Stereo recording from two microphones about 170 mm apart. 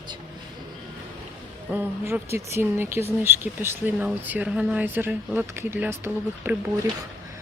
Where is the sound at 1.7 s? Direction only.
15° right (ahead or behind).